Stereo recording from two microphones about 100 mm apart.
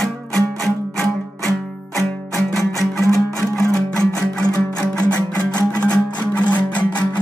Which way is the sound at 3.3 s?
10° left (ahead or behind).